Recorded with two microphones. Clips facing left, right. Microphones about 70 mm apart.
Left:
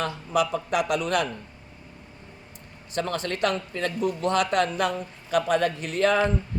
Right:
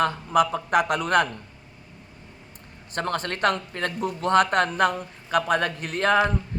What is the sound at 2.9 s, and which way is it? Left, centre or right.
A man's voice, right.